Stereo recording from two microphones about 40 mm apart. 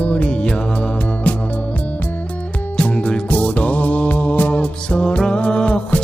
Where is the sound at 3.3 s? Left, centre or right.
Left.